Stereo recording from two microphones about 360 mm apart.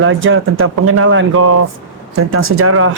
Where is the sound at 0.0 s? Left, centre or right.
Right.